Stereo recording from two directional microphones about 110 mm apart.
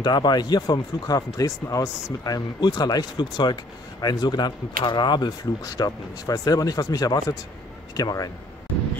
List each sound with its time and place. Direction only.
0.0 s speech: 40° left (ahead or behind)